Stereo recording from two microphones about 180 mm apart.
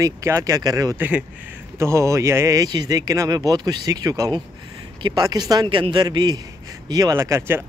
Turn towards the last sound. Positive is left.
turn(degrees=-15)  # may be behind; listen again after turning